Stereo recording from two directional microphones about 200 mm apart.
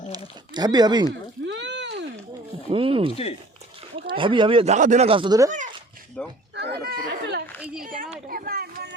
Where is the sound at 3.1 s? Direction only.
30° left (ahead or behind).